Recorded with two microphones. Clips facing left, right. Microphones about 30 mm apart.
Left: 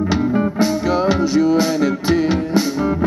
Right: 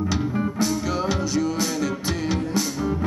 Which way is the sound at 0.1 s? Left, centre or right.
Left.